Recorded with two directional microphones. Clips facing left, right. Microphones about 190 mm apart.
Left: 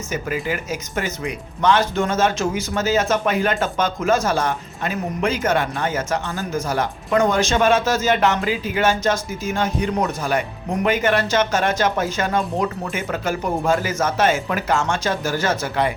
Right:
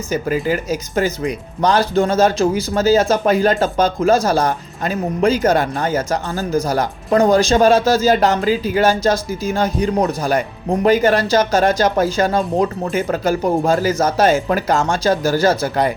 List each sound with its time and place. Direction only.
0.1 s speech: 35° right (ahead or behind)